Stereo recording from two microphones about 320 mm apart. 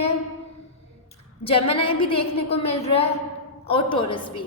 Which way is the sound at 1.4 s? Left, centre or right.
Centre.